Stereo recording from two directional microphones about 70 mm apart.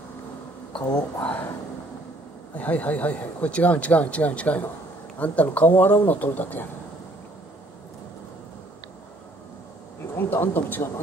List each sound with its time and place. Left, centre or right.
0.7 s speech: centre
2.5 s speech: left
10.1 s speech: left